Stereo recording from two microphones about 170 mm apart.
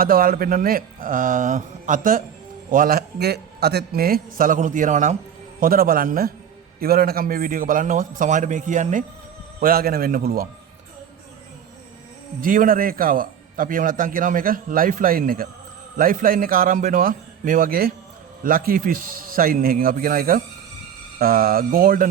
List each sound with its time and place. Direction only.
0.0 s a man's voice: 60° right (ahead or behind)
5.5 s a man's voice: 60° right (ahead or behind)
9.6 s a man's voice: 60° right (ahead or behind)
12.4 s a man's voice: 55° right (ahead or behind)